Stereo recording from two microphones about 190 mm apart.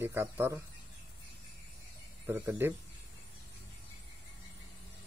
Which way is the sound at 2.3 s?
10° right (ahead or behind).